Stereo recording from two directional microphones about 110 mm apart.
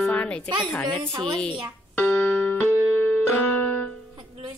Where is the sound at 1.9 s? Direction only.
15° left (ahead or behind).